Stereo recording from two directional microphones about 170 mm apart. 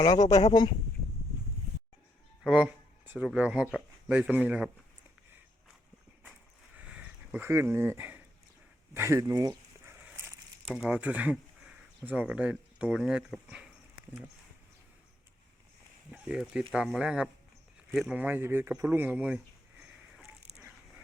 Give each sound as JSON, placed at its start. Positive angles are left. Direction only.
{"t": 0.0, "sound": "speech", "side_deg": 20}
{"t": 2.4, "sound": "speech", "side_deg": -5}
{"t": 6.8, "sound": "a sound", "side_deg": -5}
{"t": 10.8, "sound": "speech", "side_deg": -5}
{"t": 16.1, "sound": "speech", "side_deg": -5}